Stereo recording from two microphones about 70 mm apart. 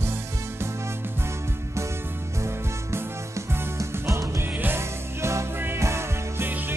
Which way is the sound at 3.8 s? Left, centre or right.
Right.